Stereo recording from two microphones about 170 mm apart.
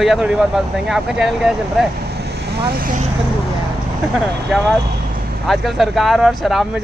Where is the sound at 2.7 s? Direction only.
55° right (ahead or behind).